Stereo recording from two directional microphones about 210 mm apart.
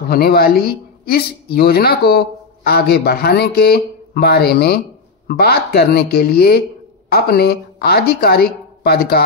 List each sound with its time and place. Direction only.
0.1 s a woman's voice: 45° left (ahead or behind)